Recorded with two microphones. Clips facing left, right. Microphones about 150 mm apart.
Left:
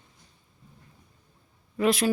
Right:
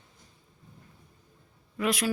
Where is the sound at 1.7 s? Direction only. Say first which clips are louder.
Left 5 dB; 30° left (ahead or behind).